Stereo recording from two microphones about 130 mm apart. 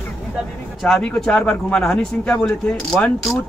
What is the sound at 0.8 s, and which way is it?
A man's voice, 5° left (ahead or behind).